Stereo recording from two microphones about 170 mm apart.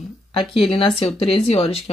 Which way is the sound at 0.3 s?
30° left (ahead or behind).